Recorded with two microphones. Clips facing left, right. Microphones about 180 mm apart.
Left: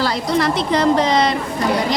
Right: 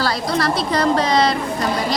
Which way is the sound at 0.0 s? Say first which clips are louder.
Left 2 dB; 20° left (ahead or behind).